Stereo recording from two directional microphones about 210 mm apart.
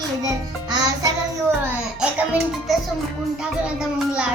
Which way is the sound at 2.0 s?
Centre (ahead or behind).